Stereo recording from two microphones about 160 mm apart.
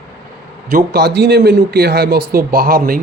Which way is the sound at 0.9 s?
90° right.